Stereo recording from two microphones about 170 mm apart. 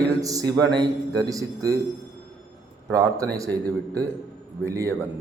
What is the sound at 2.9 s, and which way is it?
A man's voice, 20° right (ahead or behind).